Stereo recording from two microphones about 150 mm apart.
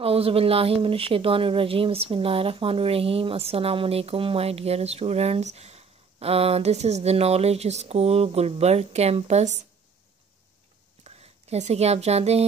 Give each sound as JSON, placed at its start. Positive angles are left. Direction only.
{"t": 0.0, "sound": "speech", "side_deg": -40}
{"t": 11.1, "sound": "speech", "side_deg": -45}